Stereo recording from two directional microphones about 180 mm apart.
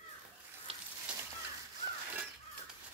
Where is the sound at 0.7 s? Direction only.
30° right (ahead or behind).